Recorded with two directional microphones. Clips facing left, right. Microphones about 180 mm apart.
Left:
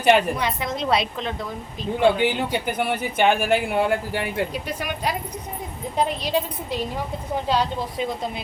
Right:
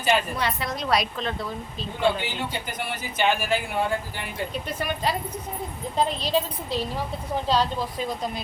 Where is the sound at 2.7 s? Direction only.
60° left (ahead or behind).